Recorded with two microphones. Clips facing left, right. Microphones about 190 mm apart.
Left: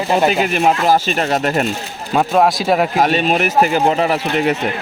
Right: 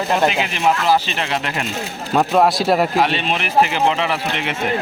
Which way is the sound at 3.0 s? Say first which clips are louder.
Left 4 dB; 45° left (ahead or behind).